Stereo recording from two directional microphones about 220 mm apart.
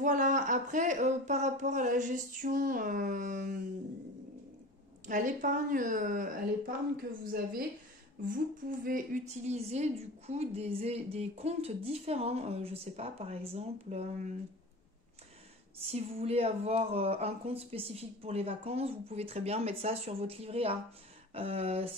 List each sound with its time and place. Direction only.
0.0 s speech: 35° right (ahead or behind)
5.0 s speech: 35° right (ahead or behind)
8.6 s a woman's voice: 40° right (ahead or behind)
15.9 s a woman's voice: 30° right (ahead or behind)